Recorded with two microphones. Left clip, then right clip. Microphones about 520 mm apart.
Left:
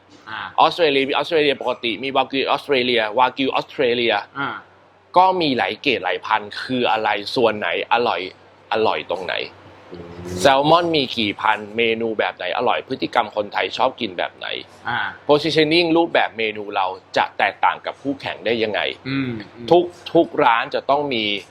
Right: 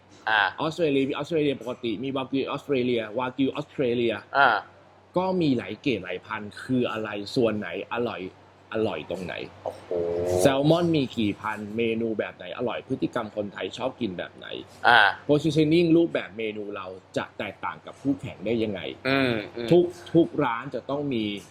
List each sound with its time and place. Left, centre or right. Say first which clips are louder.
0.5 s speech: left 10 dB; left
14.8 s speech: right 7 dB; right
15.3 s speech: left 6 dB; left
19.0 s speech: right 2 dB; right
19.7 s speech: left 6 dB; left